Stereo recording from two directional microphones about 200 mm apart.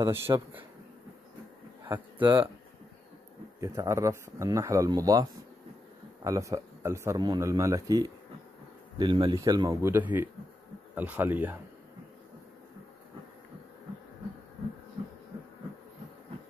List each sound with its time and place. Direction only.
0.0 s speech: 25° right (ahead or behind)
2.2 s speech: 25° right (ahead or behind)
3.6 s speech: 15° right (ahead or behind)